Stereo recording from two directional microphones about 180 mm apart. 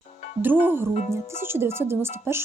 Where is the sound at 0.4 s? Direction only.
10° right (ahead or behind).